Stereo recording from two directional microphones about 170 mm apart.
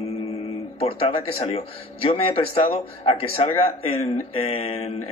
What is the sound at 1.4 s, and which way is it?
Speech, 35° left (ahead or behind).